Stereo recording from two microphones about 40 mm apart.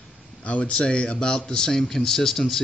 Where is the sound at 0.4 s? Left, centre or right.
Left.